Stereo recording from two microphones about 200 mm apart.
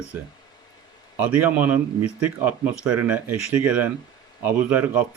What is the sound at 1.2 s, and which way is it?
Speech, 10° right (ahead or behind).